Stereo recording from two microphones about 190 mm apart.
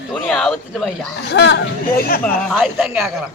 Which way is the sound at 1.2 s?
65° left (ahead or behind).